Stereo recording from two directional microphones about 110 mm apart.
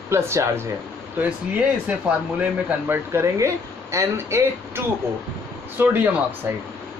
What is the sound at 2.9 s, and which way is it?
Speech, 25° right (ahead or behind).